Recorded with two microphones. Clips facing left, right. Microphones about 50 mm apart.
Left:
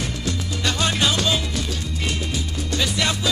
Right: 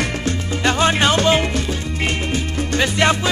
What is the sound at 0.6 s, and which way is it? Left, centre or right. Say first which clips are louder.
Music: right 6 dB; right.